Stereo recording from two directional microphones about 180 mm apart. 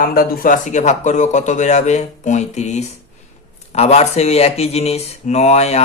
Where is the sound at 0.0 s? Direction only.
55° left (ahead or behind).